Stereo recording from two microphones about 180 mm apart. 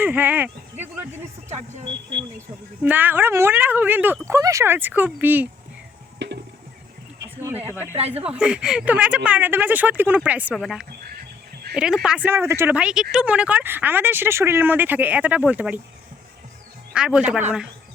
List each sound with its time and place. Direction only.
0.0 s speech: 10° right (ahead or behind)
1.5 s speech: 40° right (ahead or behind)
2.8 s speech: 10° right (ahead or behind)
6.1 s music: 75° right (ahead or behind)
8.1 s speech: 5° right (ahead or behind)
16.9 s a man's voice: 5° right (ahead or behind)